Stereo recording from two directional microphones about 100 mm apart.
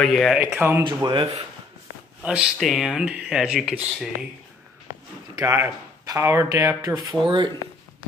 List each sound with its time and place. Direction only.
0.0 s speech: centre (ahead or behind)
0.4 s speech: 20° right (ahead or behind)
0.8 s speech: 55° right (ahead or behind)
2.6 s speech: centre (ahead or behind)
5.4 s speech: 30° right (ahead or behind)
7.2 s speech: 50° right (ahead or behind)